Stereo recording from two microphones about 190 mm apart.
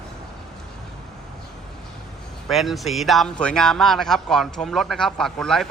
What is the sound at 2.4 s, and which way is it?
Speech, centre (ahead or behind).